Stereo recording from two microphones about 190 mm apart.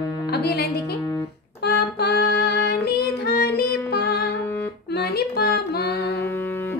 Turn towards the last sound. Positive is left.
turn(degrees=55)  # may be behind; listen again after turning